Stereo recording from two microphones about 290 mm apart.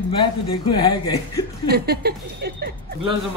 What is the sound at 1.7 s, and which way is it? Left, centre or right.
Speech, right.